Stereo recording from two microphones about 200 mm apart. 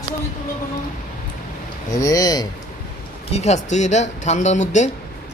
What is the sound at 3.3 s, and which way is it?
Speech, 35° left (ahead or behind).